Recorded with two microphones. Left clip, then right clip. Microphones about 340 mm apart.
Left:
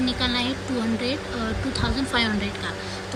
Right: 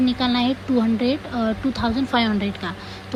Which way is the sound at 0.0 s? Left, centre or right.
Centre.